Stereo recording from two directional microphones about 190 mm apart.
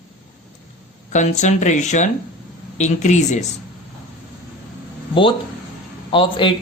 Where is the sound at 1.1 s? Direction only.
40° left (ahead or behind).